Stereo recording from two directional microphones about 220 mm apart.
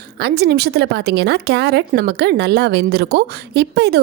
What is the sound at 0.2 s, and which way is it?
A woman's voice, 45° right (ahead or behind).